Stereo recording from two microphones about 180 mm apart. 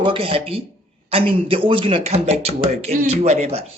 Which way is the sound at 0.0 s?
30° right (ahead or behind).